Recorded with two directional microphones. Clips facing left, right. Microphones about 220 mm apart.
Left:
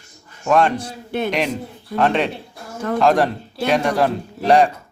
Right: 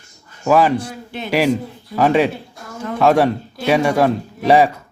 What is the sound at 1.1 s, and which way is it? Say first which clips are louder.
Speech: left 7 dB; 50° left (ahead or behind).